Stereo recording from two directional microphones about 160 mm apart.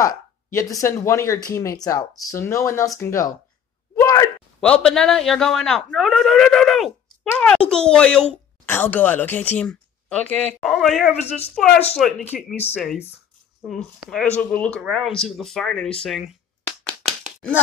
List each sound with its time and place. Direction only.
0.0 s speech: 20° left (ahead or behind)
3.9 s a sound: 15° left (ahead or behind)
4.6 s speech: 5° left (ahead or behind)
11.1 s a woman's voice: 40° left (ahead or behind)
12.0 s speech: centre (ahead or behind)
16.6 s clapping: 5° left (ahead or behind)